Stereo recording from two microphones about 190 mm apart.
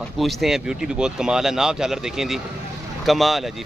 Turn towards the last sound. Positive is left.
turn(degrees=0)  # may be behind; listen again after turning